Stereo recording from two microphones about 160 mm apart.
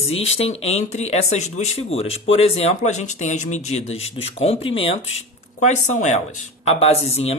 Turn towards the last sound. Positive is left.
turn(degrees=40)  # may be behind; listen again after turning